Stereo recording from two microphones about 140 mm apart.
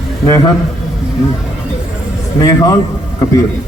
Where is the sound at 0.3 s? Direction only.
25° left (ahead or behind).